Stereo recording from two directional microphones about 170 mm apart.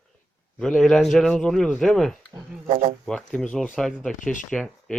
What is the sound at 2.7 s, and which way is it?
Speech, 40° right (ahead or behind).